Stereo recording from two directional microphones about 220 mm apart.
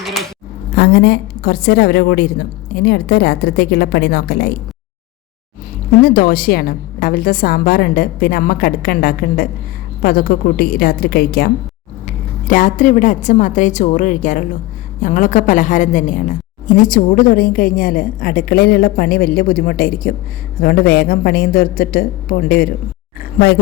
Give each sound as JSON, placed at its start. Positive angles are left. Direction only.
{"t": 0.0, "sound": "a sound", "side_deg": 0}
{"t": 0.8, "sound": "a woman's voice", "side_deg": 45}
{"t": 6.0, "sound": "a woman's voice", "side_deg": 40}